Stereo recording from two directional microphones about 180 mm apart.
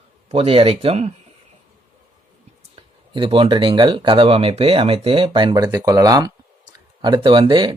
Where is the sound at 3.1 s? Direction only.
30° right (ahead or behind).